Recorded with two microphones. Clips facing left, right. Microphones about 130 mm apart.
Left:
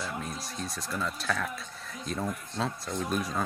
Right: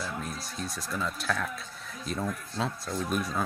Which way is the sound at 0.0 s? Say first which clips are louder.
Even; centre (ahead or behind).